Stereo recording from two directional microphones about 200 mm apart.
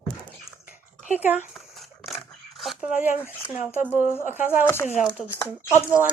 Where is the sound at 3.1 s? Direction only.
10° left (ahead or behind).